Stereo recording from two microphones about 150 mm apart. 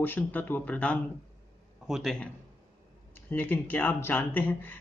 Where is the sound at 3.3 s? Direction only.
10° left (ahead or behind).